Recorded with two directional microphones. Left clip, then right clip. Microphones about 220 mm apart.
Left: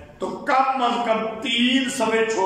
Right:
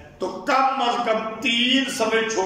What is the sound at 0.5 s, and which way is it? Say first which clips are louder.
A man's voice: even; 5° right (ahead or behind).